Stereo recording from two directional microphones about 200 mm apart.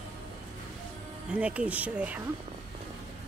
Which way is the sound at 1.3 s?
5° right (ahead or behind).